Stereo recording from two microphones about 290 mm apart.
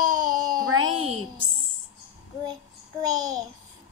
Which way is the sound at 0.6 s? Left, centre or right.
Right.